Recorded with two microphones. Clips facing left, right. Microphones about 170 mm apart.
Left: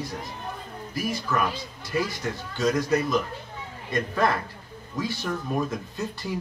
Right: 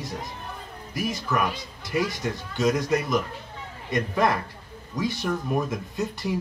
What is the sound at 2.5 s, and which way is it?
Speech, 20° right (ahead or behind).